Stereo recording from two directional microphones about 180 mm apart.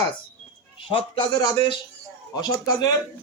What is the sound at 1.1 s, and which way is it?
A man's voice, 25° left (ahead or behind).